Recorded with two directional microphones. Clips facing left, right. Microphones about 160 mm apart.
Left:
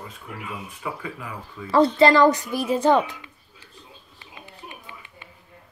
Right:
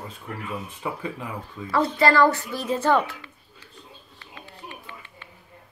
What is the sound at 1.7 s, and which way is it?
A woman's voice, 25° left (ahead or behind).